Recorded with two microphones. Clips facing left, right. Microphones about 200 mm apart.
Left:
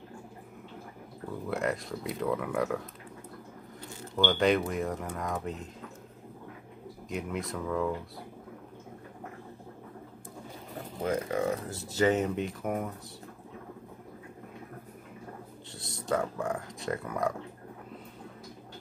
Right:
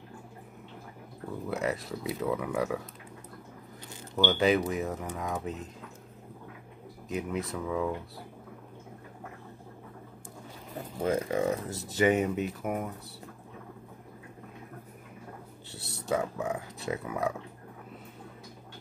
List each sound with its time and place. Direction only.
1.5 s speech: centre (ahead or behind)
4.2 s speech: 5° right (ahead or behind)
7.1 s speech: centre (ahead or behind)
11.1 s speech: 20° right (ahead or behind)
12.0 s speech: 10° right (ahead or behind)
15.7 s speech: 5° right (ahead or behind)